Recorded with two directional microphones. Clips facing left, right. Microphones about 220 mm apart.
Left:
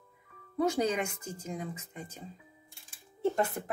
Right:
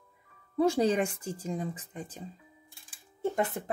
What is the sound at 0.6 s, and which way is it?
Speech, 30° right (ahead or behind).